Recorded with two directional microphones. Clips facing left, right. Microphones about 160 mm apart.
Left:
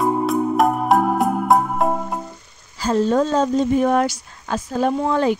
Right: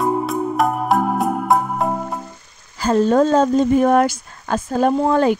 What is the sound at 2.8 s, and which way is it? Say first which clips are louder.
Speech: right 3 dB; 55° right (ahead or behind).